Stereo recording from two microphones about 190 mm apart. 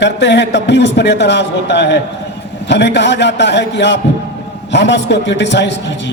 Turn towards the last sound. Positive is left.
turn(degrees=65)  # may be behind; listen again after turning